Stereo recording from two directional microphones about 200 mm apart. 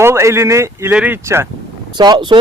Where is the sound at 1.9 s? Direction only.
20° right (ahead or behind).